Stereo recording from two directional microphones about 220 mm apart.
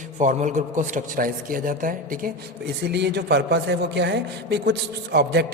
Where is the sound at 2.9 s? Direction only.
50° right (ahead or behind).